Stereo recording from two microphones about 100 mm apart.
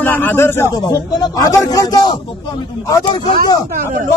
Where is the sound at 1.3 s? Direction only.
35° left (ahead or behind).